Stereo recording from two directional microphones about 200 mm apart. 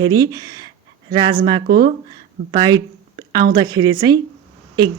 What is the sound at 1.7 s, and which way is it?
Speech, 50° right (ahead or behind).